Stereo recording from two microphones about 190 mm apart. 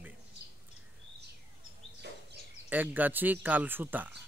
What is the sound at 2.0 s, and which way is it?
Bird, 60° right (ahead or behind).